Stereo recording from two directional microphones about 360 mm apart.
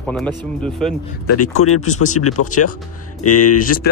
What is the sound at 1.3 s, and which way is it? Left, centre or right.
Speech, left.